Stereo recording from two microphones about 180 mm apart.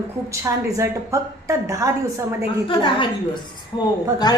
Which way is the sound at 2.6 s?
25° left (ahead or behind).